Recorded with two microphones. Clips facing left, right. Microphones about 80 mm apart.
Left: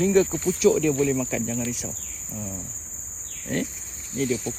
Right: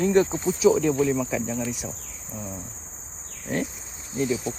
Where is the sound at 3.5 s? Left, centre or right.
Centre.